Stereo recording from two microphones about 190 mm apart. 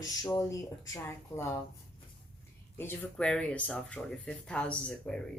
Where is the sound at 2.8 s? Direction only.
10° left (ahead or behind).